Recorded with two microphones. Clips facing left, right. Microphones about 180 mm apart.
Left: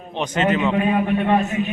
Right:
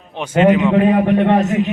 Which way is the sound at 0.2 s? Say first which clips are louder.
Right 7 dB; 10° right (ahead or behind).